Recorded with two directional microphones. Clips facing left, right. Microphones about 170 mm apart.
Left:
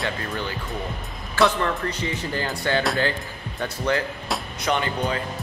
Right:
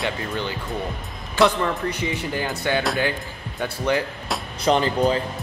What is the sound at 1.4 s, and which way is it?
Speech, 15° right (ahead or behind).